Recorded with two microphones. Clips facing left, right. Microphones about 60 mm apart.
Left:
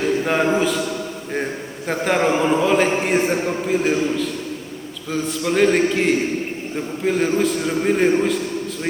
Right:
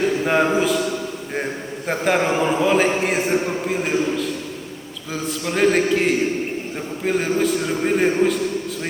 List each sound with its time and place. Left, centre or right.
0.3 s a man's voice: centre
1.9 s a man's voice: centre